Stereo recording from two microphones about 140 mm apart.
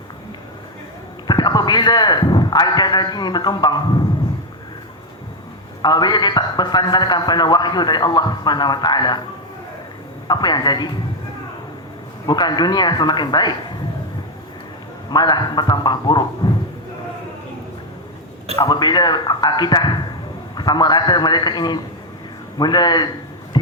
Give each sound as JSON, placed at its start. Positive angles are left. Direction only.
{"t": 1.3, "sound": "a sound", "side_deg": 30}
{"t": 5.8, "sound": "a man's voice", "side_deg": 30}
{"t": 10.2, "sound": "a man's voice", "side_deg": 30}
{"t": 12.2, "sound": "a man's voice", "side_deg": 30}
{"t": 15.1, "sound": "a man's voice", "side_deg": 30}
{"t": 16.4, "sound": "a sound", "side_deg": 35}
{"t": 18.5, "sound": "a man's voice", "side_deg": 30}